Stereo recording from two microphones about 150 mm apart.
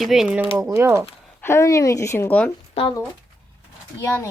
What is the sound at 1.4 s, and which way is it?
Speech, 15° left (ahead or behind).